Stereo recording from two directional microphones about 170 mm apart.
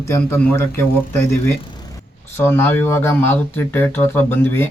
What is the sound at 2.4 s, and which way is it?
Speech, 15° left (ahead or behind).